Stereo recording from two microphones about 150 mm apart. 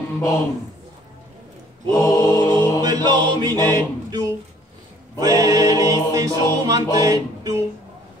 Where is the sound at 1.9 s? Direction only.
20° left (ahead or behind).